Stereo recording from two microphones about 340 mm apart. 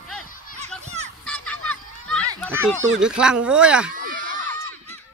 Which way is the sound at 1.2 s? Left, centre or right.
Centre.